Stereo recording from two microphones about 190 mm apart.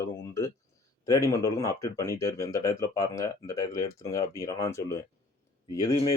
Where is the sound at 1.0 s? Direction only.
20° left (ahead or behind).